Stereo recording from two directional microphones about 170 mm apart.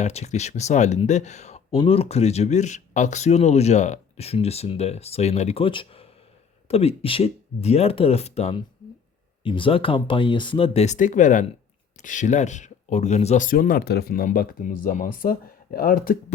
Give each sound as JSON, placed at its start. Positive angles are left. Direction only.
{"t": 0.0, "sound": "speech", "side_deg": 40}